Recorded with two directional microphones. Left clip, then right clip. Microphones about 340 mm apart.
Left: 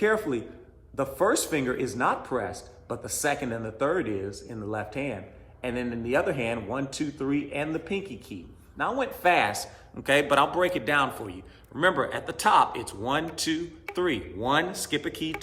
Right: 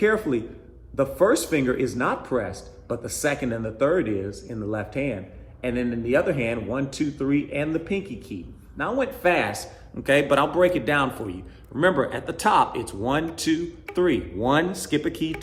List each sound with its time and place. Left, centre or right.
0.0 s a man's voice: centre